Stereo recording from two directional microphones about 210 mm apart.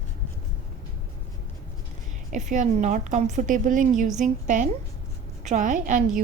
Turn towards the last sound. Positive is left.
turn(degrees=-40)  # may be behind; listen again after turning